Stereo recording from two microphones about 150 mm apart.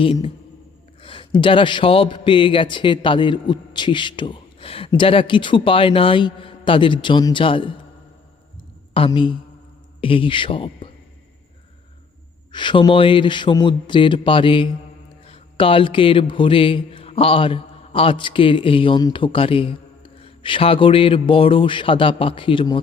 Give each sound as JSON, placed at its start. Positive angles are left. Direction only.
{"t": 0.0, "sound": "speech", "side_deg": 40}
{"t": 8.9, "sound": "speech", "side_deg": 35}
{"t": 12.5, "sound": "speech", "side_deg": 30}